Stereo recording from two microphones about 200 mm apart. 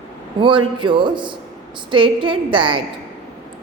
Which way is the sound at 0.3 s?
25° right (ahead or behind).